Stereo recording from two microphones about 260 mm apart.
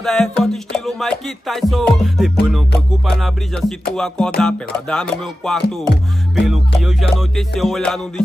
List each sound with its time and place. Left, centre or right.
0.0 s music: centre